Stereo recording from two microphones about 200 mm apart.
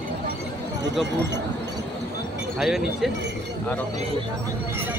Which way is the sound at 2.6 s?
Centre (ahead or behind).